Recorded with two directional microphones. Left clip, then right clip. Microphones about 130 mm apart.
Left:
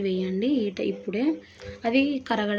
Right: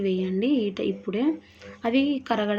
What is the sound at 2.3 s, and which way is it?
Speech, 20° right (ahead or behind).